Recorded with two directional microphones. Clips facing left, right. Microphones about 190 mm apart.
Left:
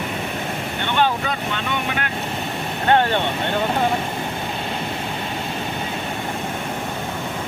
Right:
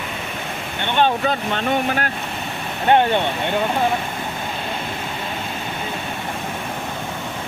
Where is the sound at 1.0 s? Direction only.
25° right (ahead or behind).